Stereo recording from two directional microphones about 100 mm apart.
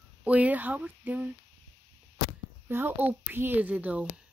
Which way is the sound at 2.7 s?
20° right (ahead or behind).